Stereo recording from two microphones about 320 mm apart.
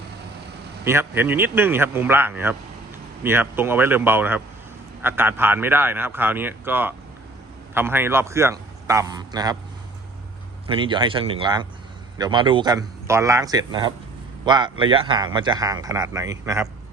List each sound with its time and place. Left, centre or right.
0.9 s speech: centre
10.7 s speech: centre